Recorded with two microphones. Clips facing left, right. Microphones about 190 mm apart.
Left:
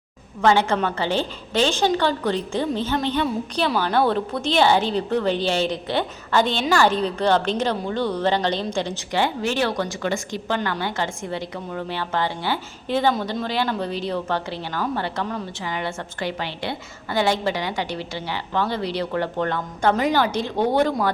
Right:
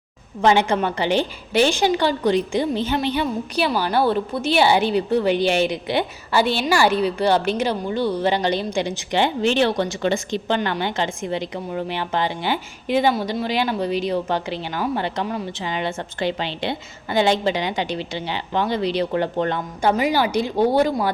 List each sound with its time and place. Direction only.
0.4 s a woman's voice: 15° right (ahead or behind)
9.1 s speech: 20° right (ahead or behind)
19.8 s a woman's voice: 10° right (ahead or behind)